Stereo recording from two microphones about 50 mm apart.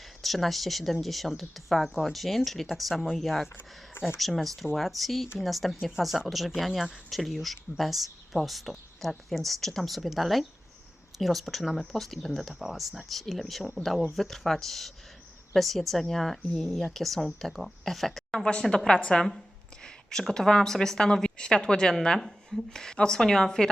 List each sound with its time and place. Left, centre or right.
0.2 s speech: centre
18.9 s a woman's voice: centre